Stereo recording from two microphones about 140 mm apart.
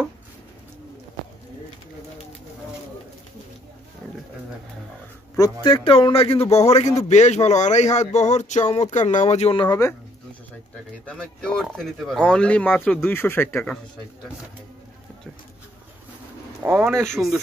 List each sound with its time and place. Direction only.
5.6 s speech: 35° left (ahead or behind)
9.7 s speech: 25° left (ahead or behind)
11.1 s speech: 5° left (ahead or behind)
16.6 s speech: 15° right (ahead or behind)
17.1 s speech: centre (ahead or behind)